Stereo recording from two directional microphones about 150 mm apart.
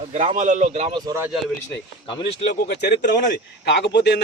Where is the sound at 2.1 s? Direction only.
30° left (ahead or behind).